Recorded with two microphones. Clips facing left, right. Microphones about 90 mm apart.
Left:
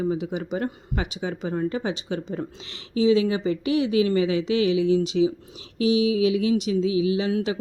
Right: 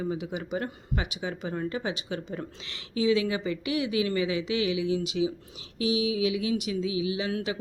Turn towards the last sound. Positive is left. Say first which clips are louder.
# left 6 dB
turn(degrees=30)  # may be behind; listen again after turning